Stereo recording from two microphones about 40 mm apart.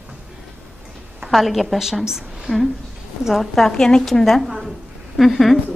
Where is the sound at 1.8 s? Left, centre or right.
Centre.